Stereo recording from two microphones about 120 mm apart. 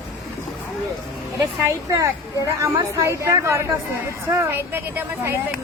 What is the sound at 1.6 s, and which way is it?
A woman's voice, 25° right (ahead or behind).